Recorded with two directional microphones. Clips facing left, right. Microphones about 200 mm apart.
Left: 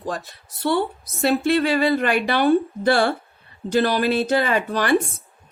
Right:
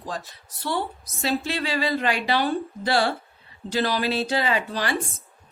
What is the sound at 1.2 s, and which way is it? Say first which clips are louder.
Speech: left 8 dB; 55° left (ahead or behind).